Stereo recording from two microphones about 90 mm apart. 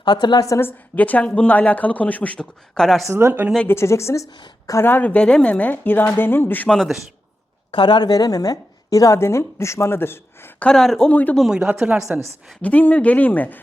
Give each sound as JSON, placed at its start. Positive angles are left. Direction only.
{"t": 0.0, "sound": "a woman's voice", "side_deg": 55}
{"t": 0.6, "sound": "speech", "side_deg": 20}
{"t": 3.1, "sound": "a woman's voice", "side_deg": -30}
{"t": 3.7, "sound": "a woman's voice", "side_deg": 30}
{"t": 4.9, "sound": "a woman's voice", "side_deg": 20}
{"t": 6.7, "sound": "a man's voice", "side_deg": 0}
{"t": 7.7, "sound": "a woman's voice", "side_deg": 60}
{"t": 10.6, "sound": "speech", "side_deg": 5}
{"t": 11.1, "sound": "speech", "side_deg": 15}
{"t": 11.3, "sound": "speech", "side_deg": -5}
{"t": 12.6, "sound": "speech", "side_deg": 15}